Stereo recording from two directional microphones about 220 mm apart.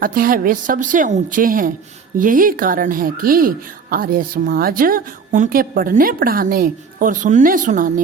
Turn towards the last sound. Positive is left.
turn(degrees=-35)  # may be behind; listen again after turning